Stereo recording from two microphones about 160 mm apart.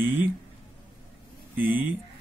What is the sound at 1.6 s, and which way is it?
Speech, 10° right (ahead or behind).